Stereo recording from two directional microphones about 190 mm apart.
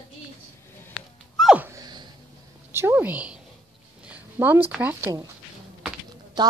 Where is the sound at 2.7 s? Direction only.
10° right (ahead or behind).